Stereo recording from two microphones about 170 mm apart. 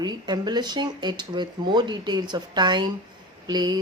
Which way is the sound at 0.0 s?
25° right (ahead or behind).